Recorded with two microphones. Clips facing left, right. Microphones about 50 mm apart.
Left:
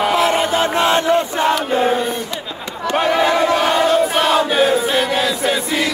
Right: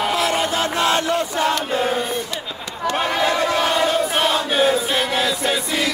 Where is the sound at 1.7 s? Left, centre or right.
Left.